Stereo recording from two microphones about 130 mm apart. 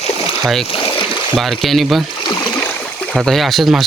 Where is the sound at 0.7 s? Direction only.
40° left (ahead or behind).